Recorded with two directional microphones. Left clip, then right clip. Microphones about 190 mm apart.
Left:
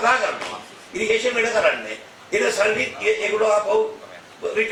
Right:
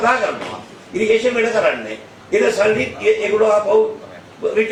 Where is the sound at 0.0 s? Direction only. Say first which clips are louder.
Right 3 dB; 20° right (ahead or behind).